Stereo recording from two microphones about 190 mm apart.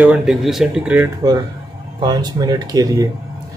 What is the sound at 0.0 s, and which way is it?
Speech, 5° right (ahead or behind).